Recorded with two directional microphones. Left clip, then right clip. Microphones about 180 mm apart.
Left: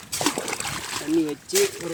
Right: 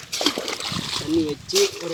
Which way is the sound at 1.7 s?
45° left (ahead or behind).